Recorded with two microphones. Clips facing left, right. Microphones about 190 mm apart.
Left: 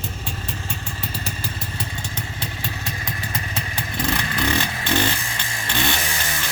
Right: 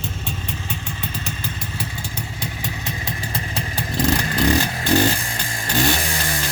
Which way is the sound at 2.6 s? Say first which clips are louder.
Right 2 dB; 20° right (ahead or behind).